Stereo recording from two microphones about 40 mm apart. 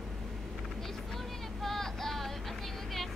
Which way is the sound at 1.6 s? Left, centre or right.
Centre.